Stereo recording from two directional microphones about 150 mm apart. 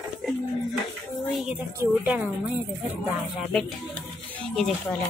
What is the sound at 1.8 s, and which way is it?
Speech, 10° right (ahead or behind).